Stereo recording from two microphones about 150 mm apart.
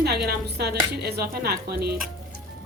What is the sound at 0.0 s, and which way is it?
Speech, 90° right.